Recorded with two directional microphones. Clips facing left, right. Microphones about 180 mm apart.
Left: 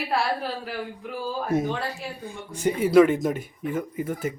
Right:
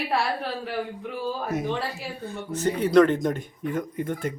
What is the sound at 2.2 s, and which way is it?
Speech, 10° left (ahead or behind).